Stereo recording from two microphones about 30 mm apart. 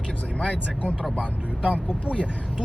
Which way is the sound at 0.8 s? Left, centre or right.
Centre.